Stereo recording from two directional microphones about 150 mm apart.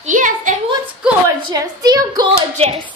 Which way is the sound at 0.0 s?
60° right (ahead or behind).